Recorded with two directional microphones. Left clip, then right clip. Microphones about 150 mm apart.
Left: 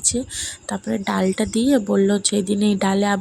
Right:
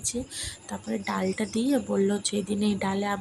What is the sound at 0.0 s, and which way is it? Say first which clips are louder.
Speech: left 9 dB; 40° left (ahead or behind).